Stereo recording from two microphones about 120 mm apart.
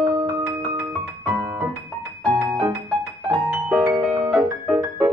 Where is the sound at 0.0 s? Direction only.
30° right (ahead or behind).